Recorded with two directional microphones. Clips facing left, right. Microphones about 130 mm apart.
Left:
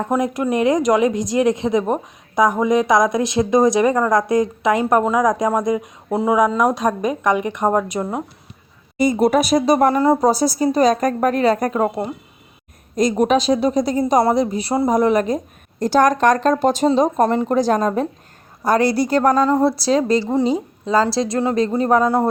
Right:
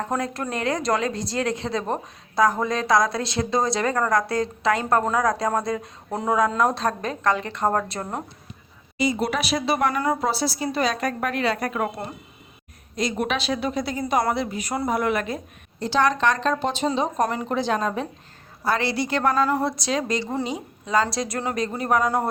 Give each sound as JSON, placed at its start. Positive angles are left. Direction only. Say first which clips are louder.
{"t": 0.0, "sound": "speech", "louder": "left 7 dB", "side_deg": 15}
{"t": 9.0, "sound": "speech", "louder": "left 8 dB", "side_deg": 50}
{"t": 10.2, "sound": "speech", "louder": "left 9 dB", "side_deg": 40}
{"t": 13.0, "sound": "speech", "louder": "left 9 dB", "side_deg": 40}
{"t": 19.3, "sound": "a woman's voice", "louder": "left 6 dB", "side_deg": 20}
{"t": 19.7, "sound": "a woman's voice", "louder": "left 8 dB", "side_deg": 35}
{"t": 22.0, "sound": "speech", "louder": "left 6 dB", "side_deg": 15}